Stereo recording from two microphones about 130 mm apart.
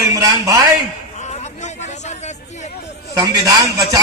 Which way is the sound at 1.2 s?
60° left (ahead or behind).